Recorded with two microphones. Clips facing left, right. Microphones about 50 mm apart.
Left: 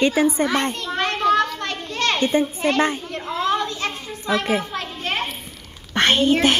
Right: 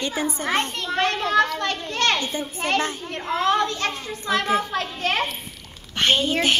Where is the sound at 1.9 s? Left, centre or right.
Right.